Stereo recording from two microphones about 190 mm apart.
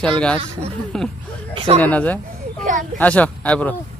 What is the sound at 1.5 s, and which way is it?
Speech, 35° right (ahead or behind).